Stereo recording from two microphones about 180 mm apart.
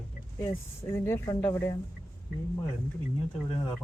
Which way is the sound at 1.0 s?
15° left (ahead or behind).